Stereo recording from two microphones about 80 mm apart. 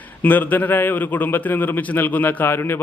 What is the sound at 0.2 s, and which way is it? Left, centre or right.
A man's voice, left.